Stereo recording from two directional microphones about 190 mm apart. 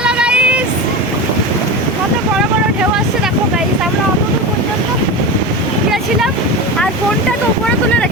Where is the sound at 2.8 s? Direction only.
5° right (ahead or behind).